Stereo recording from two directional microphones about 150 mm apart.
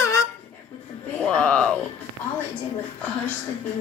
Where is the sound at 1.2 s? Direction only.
5° left (ahead or behind).